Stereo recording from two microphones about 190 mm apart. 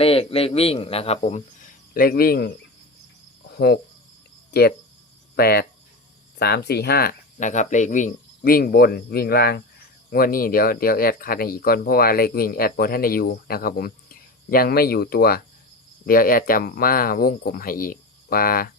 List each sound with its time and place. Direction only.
0.0 s a man's voice: 30° left (ahead or behind)
1.9 s speech: 50° left (ahead or behind)
5.4 s speech: 55° left (ahead or behind)